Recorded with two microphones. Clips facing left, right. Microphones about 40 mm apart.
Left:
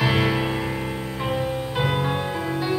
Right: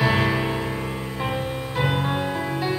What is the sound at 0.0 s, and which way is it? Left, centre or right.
Music, centre.